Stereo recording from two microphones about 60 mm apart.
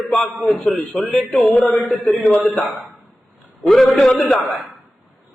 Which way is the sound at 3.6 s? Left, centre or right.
Centre.